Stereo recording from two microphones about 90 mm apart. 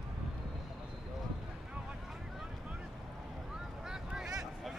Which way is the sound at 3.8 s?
5° right (ahead or behind).